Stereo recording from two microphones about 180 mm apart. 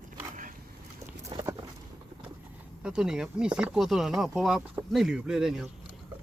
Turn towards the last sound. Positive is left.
turn(degrees=0)  # may be behind; listen again after turning